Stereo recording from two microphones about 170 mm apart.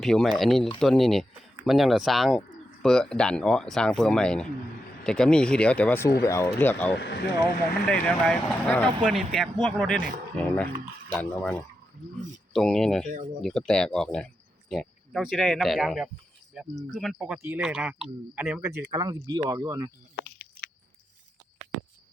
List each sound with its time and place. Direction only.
0.0 s speech: centre (ahead or behind)
6.9 s speech: 80° left
7.9 s speech: 5° left (ahead or behind)
11.1 s speech: 10° left (ahead or behind)
18.9 s speech: 25° right (ahead or behind)
20.2 s a sound: 65° left (ahead or behind)